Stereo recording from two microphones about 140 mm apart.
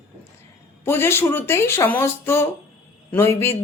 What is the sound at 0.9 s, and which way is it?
Speech, 15° left (ahead or behind).